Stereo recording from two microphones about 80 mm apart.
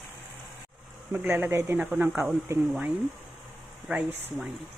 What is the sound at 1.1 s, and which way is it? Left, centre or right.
Speech, right.